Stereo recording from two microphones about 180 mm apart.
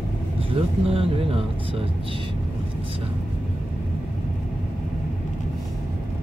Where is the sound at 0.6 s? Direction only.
30° right (ahead or behind).